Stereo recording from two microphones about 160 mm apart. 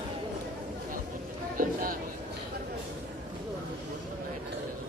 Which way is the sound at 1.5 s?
60° right (ahead or behind).